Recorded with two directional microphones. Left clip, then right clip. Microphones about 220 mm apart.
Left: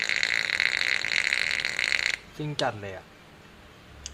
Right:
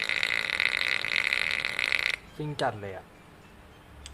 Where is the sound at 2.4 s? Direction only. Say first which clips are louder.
Left 1 dB; 5° left (ahead or behind).